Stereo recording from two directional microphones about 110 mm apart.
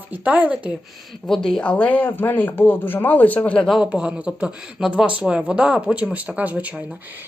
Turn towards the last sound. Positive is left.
turn(degrees=-15)  # may be behind; listen again after turning